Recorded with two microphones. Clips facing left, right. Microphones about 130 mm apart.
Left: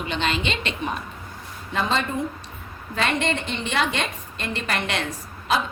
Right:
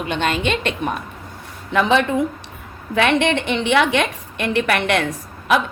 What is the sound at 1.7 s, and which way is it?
A woman's voice, 70° right (ahead or behind).